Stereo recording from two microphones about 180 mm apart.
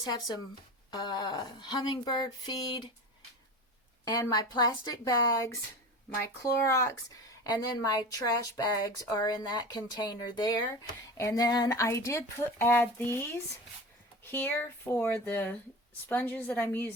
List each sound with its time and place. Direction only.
0.0 s speech: 20° left (ahead or behind)
4.0 s speech: 20° left (ahead or behind)
14.3 s speech: 10° left (ahead or behind)